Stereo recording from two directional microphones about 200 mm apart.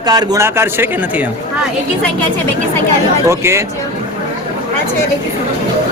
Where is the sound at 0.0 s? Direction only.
20° right (ahead or behind).